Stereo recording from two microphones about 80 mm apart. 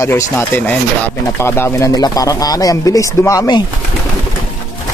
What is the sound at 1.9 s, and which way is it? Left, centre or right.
Speech, left.